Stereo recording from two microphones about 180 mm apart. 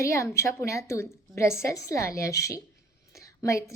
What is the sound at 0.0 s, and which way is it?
A woman's voice, 15° left (ahead or behind).